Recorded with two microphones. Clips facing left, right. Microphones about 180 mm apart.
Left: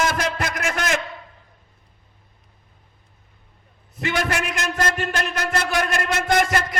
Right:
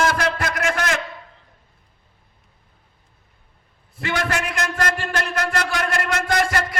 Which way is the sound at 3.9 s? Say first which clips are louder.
Even; 20° left (ahead or behind).